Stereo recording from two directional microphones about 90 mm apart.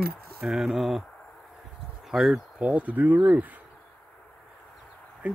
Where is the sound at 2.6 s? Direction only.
15° right (ahead or behind).